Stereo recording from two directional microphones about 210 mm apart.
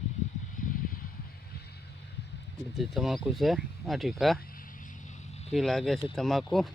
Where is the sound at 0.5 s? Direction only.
40° left (ahead or behind).